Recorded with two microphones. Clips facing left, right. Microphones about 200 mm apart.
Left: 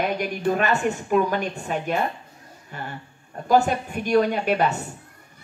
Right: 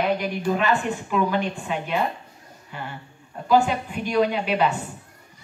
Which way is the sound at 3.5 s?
45° left (ahead or behind).